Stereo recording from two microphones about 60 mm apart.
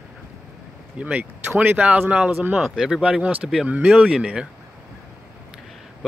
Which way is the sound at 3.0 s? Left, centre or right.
Right.